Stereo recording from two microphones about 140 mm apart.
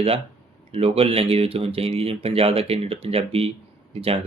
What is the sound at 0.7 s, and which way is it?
Speech, 45° right (ahead or behind).